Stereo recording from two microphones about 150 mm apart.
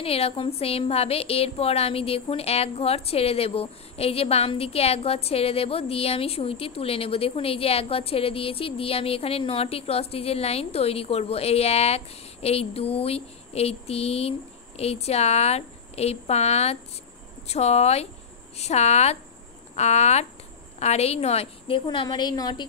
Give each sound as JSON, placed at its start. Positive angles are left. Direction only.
{"t": 0.0, "sound": "speech", "side_deg": 40}